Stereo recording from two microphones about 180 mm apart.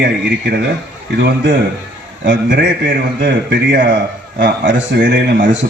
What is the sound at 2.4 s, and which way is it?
A man's voice, 50° right (ahead or behind).